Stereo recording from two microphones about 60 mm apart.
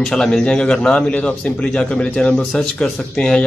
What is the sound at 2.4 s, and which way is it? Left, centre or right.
A man's voice, centre.